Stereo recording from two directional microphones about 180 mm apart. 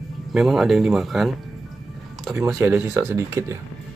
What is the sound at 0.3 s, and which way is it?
Speech, centre (ahead or behind).